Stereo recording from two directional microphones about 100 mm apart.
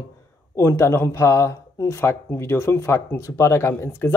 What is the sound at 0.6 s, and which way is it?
Speech, 30° left (ahead or behind).